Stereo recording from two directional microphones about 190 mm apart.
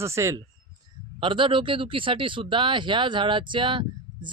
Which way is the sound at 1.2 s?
25° right (ahead or behind).